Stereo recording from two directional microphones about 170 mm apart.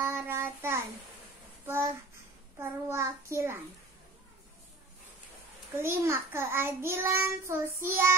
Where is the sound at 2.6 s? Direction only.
15° right (ahead or behind).